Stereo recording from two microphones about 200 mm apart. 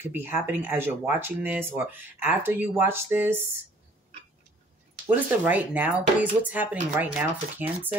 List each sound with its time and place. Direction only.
0.0 s speech: 10° right (ahead or behind)
5.0 s speech: 10° right (ahead or behind)